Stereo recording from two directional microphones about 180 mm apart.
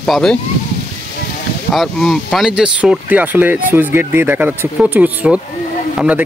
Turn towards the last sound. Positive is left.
turn(degrees=-5)  # may be behind; listen again after turning